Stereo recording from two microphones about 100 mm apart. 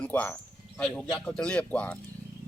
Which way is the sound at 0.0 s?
15° left (ahead or behind).